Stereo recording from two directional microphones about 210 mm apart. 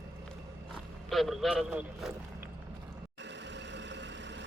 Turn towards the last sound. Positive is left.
turn(degrees=-55)  # may be behind; listen again after turning